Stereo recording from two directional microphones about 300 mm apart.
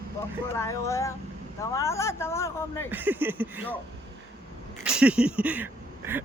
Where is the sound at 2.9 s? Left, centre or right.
Centre.